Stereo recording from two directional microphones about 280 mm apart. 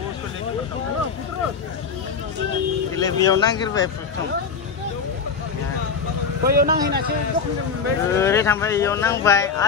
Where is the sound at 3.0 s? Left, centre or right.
Centre.